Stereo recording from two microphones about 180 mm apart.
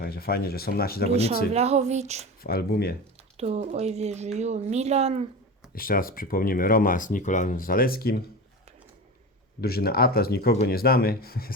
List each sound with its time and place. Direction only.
0.0 s speech: 60° left (ahead or behind)
1.5 s speech: 35° right (ahead or behind)
2.4 s speech: 60° left (ahead or behind)
3.3 s speech: 35° right (ahead or behind)
5.7 s speech: 55° left (ahead or behind)
9.6 s speech: 60° left (ahead or behind)